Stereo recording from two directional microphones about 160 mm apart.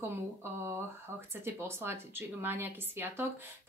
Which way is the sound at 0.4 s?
15° right (ahead or behind).